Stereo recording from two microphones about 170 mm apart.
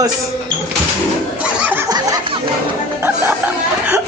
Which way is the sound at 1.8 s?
25° right (ahead or behind).